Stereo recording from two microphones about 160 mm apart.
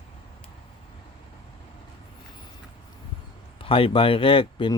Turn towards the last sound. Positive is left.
turn(degrees=35)  # may be behind; listen again after turning